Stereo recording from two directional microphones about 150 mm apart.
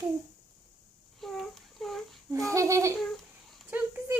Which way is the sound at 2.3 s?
20° right (ahead or behind).